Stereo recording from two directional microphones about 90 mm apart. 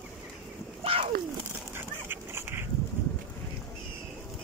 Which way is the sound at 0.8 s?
90° right.